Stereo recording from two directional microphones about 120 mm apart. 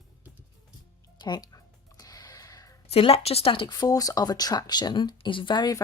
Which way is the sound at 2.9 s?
55° left (ahead or behind).